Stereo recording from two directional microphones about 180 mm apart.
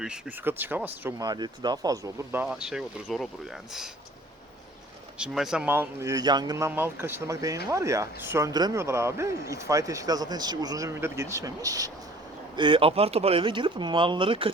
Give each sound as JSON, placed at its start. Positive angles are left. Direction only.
{"t": 0.0, "sound": "a man's voice", "side_deg": -5}
{"t": 1.2, "sound": "a man's voice", "side_deg": -25}
{"t": 5.1, "sound": "a man's voice", "side_deg": -5}
{"t": 6.7, "sound": "a man's voice", "side_deg": -10}